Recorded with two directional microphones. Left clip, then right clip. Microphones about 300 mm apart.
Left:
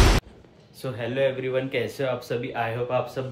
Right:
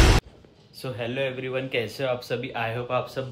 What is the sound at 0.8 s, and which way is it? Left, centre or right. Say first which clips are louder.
Speech: left 4 dB; centre.